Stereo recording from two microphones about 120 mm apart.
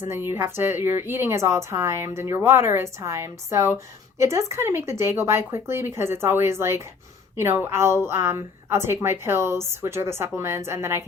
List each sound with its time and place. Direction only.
0.0 s a woman's voice: 20° right (ahead or behind)